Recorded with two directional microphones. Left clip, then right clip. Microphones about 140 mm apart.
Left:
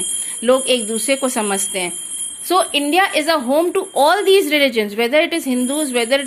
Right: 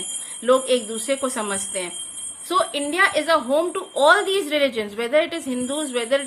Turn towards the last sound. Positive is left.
turn(degrees=30)  # may be behind; listen again after turning